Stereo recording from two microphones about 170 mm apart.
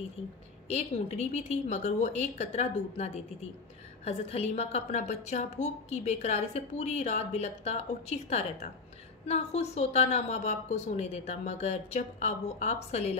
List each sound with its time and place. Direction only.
0.7 s a woman's voice: 40° left (ahead or behind)